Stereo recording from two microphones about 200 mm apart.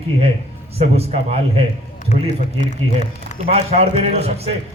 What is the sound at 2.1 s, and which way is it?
Speech, 35° left (ahead or behind).